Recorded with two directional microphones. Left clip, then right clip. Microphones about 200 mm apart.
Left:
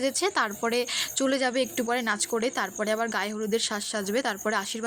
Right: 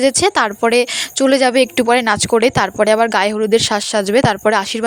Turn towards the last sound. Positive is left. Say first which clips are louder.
# right 14 dB
turn(degrees=-40)  # may be behind; listen again after turning